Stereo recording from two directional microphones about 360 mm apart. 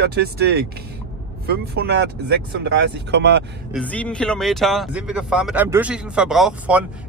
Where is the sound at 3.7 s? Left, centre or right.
Centre.